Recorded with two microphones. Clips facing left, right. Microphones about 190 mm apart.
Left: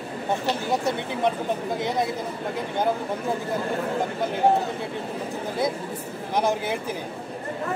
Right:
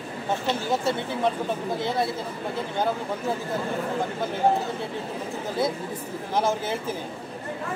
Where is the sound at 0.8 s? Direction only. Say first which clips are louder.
Left 1 dB; 15° left (ahead or behind).